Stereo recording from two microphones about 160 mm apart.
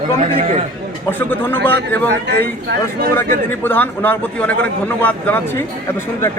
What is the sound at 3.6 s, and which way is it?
A man's voice, 10° left (ahead or behind).